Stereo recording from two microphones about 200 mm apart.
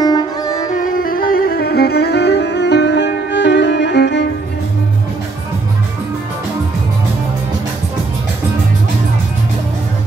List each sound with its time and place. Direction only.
0.0 s music: 20° left (ahead or behind)
0.7 s music: 40° left (ahead or behind); by 4.3 s 60° left (ahead or behind)